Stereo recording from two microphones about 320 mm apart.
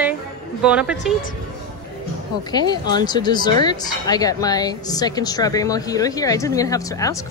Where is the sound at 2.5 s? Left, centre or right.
Centre.